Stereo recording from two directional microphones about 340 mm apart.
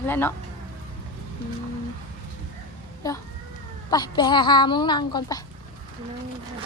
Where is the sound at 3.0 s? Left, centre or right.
Centre.